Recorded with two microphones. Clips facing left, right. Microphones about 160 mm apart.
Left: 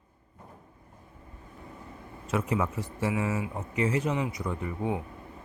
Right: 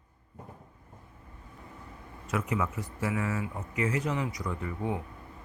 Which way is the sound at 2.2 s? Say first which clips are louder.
Left 2 dB; 30° left (ahead or behind).